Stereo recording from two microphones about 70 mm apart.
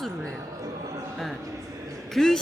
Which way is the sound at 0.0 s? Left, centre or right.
Centre.